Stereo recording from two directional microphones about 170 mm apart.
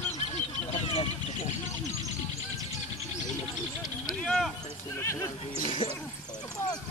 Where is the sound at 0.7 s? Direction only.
40° left (ahead or behind).